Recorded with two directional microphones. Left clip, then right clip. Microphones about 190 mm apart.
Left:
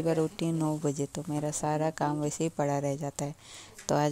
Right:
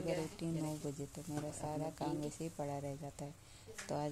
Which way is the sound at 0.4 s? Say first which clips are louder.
Left 12 dB; 30° left (ahead or behind).